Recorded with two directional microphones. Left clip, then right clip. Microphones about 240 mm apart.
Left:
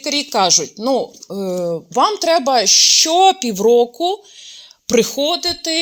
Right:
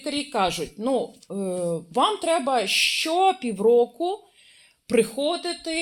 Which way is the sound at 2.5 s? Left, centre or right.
Left.